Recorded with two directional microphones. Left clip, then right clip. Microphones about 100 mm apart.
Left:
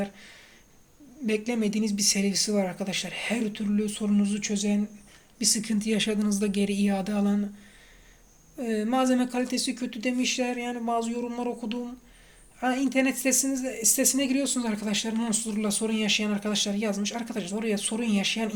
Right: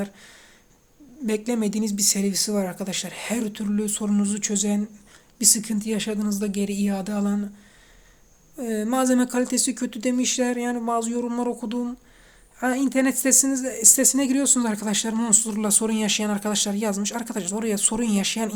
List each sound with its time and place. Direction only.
0.0 s speech: 35° right (ahead or behind); by 4.8 s 55° right (ahead or behind)
5.4 s speech: 40° right (ahead or behind)
5.6 s speech: 20° right (ahead or behind)
8.5 s speech: 30° right (ahead or behind)
9.0 s speech: 55° right (ahead or behind)
10.8 s speech: 80° right
12.5 s speech: 60° right (ahead or behind)